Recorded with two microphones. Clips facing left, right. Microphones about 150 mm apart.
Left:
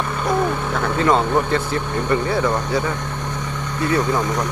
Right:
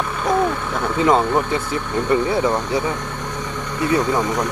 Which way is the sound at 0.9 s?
15° right (ahead or behind).